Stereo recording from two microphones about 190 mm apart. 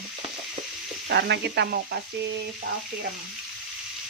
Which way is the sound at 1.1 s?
60° right (ahead or behind).